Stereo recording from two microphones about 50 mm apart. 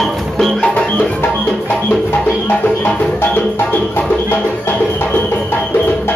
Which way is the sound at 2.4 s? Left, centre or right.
Left.